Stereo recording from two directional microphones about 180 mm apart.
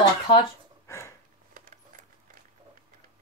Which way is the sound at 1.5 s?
50° right (ahead or behind).